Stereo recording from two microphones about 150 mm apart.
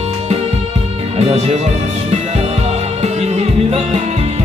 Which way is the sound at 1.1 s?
45° right (ahead or behind).